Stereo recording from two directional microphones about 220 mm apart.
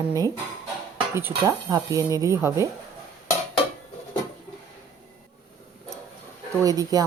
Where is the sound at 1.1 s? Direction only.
10° right (ahead or behind).